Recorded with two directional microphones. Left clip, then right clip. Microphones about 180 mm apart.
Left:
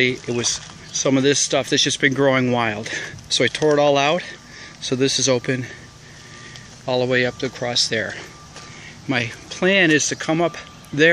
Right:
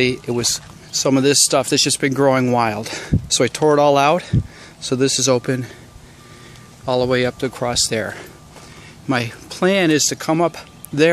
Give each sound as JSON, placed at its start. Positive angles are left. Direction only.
{"t": 0.0, "sound": "speech", "side_deg": -25}
{"t": 6.9, "sound": "speech", "side_deg": -25}